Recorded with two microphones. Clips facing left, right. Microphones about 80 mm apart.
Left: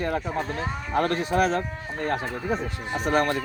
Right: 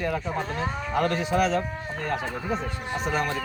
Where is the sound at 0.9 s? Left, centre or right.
Left.